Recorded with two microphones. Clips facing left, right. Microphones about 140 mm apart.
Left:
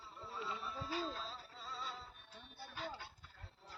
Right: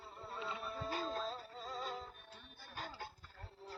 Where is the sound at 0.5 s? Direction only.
55° right (ahead or behind).